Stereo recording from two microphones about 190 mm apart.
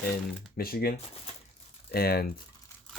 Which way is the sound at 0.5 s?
50° left (ahead or behind).